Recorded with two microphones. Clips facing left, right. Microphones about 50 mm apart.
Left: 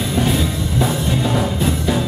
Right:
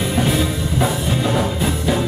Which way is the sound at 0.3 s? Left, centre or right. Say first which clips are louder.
Even; centre.